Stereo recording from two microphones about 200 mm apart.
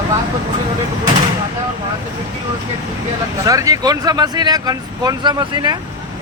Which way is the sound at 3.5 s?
15° right (ahead or behind).